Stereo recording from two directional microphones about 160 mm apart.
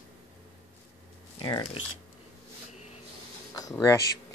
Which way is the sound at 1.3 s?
30° left (ahead or behind).